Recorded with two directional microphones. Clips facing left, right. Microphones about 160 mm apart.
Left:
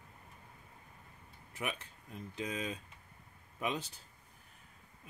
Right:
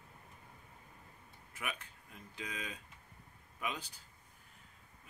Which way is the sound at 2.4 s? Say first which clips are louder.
Left 6 dB; 25° left (ahead or behind).